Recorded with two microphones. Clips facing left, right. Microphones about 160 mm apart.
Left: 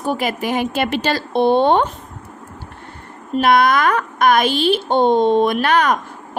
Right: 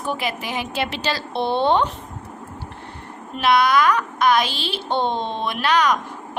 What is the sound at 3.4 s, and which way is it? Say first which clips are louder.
A woman's voice: left 3 dB; 50° left (ahead or behind).